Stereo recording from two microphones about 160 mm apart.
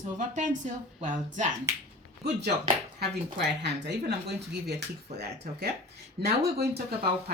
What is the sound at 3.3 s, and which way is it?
Speech, 90° right.